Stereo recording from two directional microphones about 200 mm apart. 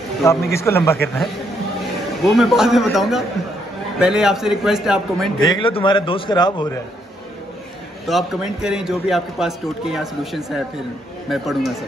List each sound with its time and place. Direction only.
0.2 s a man's voice: 15° left (ahead or behind)
2.2 s a man's voice: centre (ahead or behind)
5.4 s a man's voice: 25° left (ahead or behind)
8.1 s a man's voice: centre (ahead or behind)